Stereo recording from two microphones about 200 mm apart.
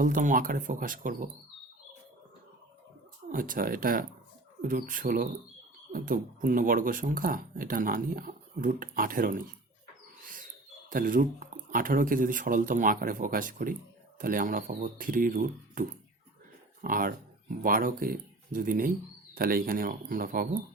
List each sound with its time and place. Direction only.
0.0 s speech: 40° right (ahead or behind)
3.2 s speech: 45° right (ahead or behind)
10.8 s speech: 45° right (ahead or behind)